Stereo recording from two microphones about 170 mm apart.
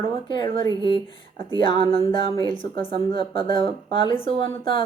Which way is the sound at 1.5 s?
30° left (ahead or behind).